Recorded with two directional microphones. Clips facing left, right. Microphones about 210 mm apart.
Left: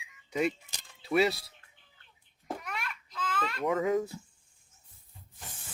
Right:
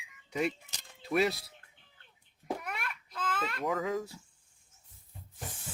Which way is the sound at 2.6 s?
55° right (ahead or behind).